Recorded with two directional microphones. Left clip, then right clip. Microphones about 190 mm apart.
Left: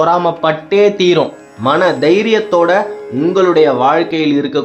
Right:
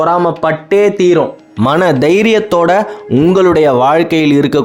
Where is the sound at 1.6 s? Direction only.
60° right (ahead or behind).